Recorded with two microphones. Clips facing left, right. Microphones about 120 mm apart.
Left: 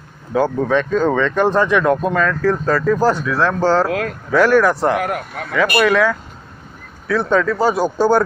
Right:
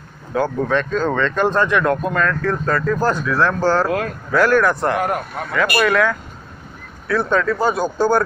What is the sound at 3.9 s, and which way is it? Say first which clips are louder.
Speech: even; 85° left.